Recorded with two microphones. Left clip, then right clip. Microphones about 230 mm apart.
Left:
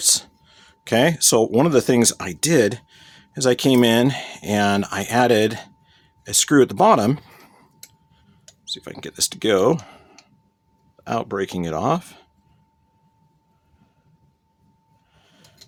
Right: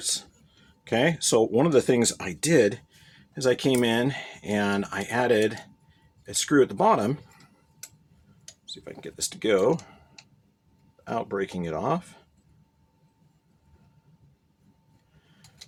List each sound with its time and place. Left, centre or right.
0.0 s speech: left
8.6 s speech: left
11.0 s speech: left